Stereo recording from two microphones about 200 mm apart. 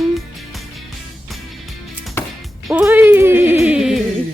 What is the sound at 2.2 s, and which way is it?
Music, 10° left (ahead or behind).